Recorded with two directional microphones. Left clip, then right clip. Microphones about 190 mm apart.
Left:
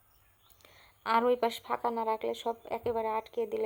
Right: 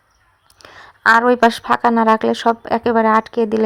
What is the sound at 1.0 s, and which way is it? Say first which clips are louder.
A woman's voice: right 16 dB; 30° right (ahead or behind).